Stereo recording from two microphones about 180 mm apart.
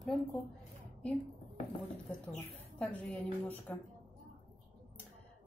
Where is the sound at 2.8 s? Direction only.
5° left (ahead or behind).